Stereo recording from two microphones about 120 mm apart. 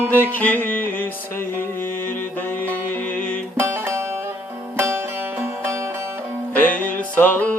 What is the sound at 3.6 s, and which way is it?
Music, 20° right (ahead or behind).